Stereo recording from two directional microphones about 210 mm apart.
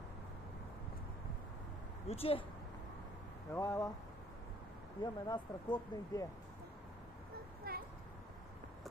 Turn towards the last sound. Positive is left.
turn(degrees=-45)  # may be behind; listen again after turning